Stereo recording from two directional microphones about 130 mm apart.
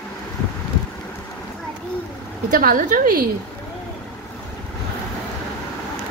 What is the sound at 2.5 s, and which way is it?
Speech, 90° right.